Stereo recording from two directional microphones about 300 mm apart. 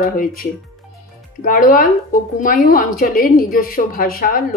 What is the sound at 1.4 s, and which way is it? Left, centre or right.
A woman's voice, left.